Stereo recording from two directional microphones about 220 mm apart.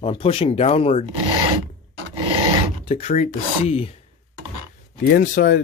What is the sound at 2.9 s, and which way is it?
Speech, 30° left (ahead or behind).